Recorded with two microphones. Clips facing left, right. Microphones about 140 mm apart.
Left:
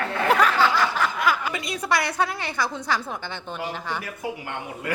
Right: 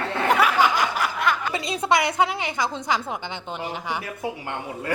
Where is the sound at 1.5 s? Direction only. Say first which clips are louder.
Right 3 dB; 25° right (ahead or behind).